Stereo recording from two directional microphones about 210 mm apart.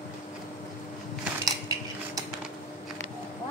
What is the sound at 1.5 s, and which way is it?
Dishes, 15° right (ahead or behind).